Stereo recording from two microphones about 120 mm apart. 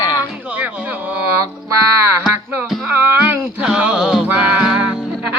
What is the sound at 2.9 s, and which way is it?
Music, 15° right (ahead or behind).